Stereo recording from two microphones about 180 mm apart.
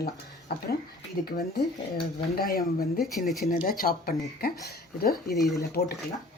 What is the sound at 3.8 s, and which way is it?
Speech, 55° left (ahead or behind).